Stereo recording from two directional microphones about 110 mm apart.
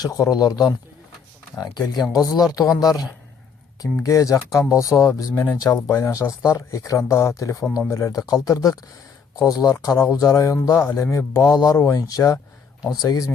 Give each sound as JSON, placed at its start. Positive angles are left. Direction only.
{"t": 0.0, "sound": "speech", "side_deg": 35}